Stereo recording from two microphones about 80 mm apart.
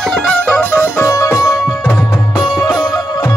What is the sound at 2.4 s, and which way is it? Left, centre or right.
Music, left.